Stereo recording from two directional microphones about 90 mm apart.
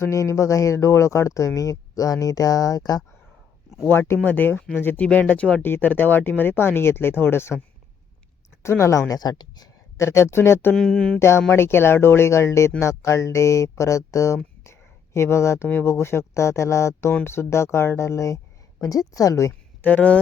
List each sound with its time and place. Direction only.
0.0 s speech: 35° left (ahead or behind)
3.8 s speech: 25° left (ahead or behind)
8.6 s speech: 30° left (ahead or behind); by 9.6 s 50° left (ahead or behind)
10.0 s speech: 30° left (ahead or behind)
10.8 s speech: 5° left (ahead or behind)
11.2 s speech: 30° left (ahead or behind)
19.8 s speech: 20° left (ahead or behind)